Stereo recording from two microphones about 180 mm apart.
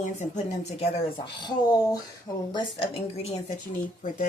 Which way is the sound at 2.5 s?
30° left (ahead or behind).